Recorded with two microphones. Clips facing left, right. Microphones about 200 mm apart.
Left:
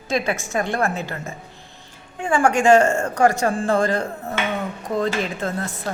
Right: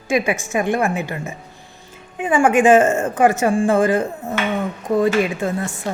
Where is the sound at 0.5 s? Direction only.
15° right (ahead or behind).